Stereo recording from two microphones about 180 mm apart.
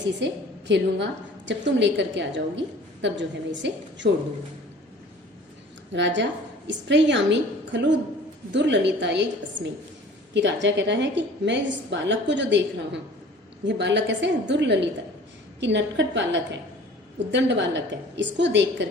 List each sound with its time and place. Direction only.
0.2 s a woman's voice: 85° right
0.7 s a woman's voice: 75° right (ahead or behind)
5.9 s a woman's voice: 85° right